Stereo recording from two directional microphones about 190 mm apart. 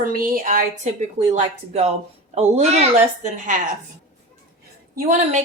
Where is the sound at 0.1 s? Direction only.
50° right (ahead or behind).